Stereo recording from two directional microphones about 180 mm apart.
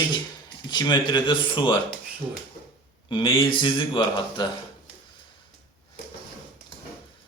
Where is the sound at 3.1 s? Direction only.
25° left (ahead or behind).